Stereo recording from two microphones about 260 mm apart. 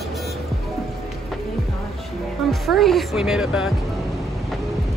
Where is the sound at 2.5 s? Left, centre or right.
Centre.